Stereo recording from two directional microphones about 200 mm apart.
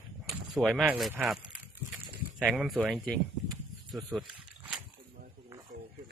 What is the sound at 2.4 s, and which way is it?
Speech, 5° right (ahead or behind).